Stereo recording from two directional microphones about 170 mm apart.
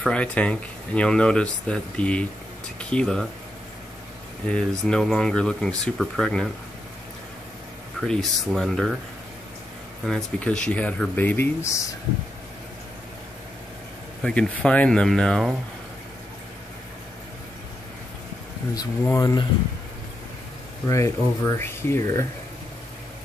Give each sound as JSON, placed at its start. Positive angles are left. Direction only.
{"t": 0.0, "sound": "speech", "side_deg": 5}
{"t": 4.5, "sound": "speech", "side_deg": 5}
{"t": 8.0, "sound": "speech", "side_deg": 0}
{"t": 10.0, "sound": "speech", "side_deg": 5}
{"t": 14.2, "sound": "speech", "side_deg": 5}
{"t": 19.0, "sound": "speech", "side_deg": 20}
{"t": 20.9, "sound": "speech", "side_deg": 15}